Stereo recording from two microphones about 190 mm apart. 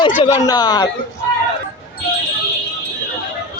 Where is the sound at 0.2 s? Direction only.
35° left (ahead or behind).